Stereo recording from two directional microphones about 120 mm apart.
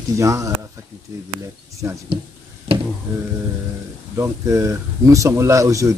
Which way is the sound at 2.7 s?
55° right (ahead or behind).